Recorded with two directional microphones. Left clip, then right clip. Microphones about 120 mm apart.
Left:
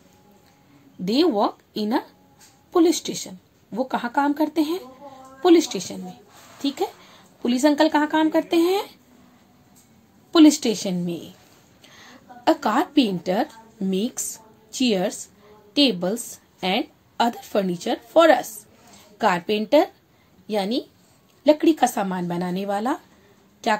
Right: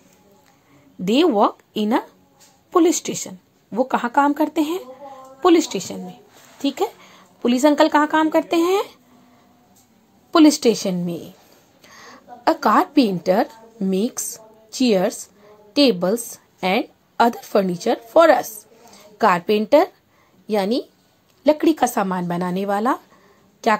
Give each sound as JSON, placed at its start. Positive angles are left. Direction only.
{"t": 1.0, "sound": "a woman's voice", "side_deg": -35}
{"t": 10.3, "sound": "a woman's voice", "side_deg": -40}